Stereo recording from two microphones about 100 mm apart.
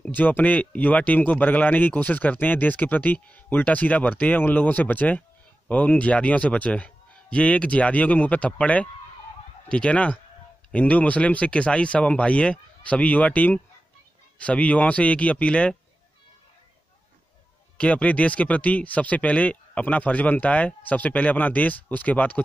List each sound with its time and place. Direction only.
0.0 s speech: 15° left (ahead or behind)
17.7 s speech: 15° left (ahead or behind)